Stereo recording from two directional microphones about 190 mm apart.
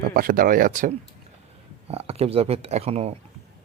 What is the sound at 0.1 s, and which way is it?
Speech, 50° right (ahead or behind).